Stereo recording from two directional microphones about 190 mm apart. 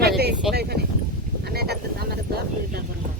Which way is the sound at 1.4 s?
55° right (ahead or behind).